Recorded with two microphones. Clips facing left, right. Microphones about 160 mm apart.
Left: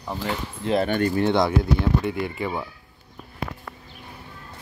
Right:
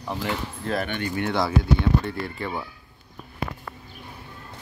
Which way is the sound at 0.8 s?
40° left (ahead or behind).